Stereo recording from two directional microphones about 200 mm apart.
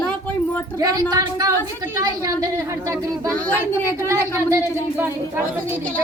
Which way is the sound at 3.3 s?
5° left (ahead or behind).